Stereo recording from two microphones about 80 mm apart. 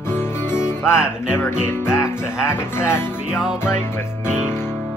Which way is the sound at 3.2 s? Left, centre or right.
Centre.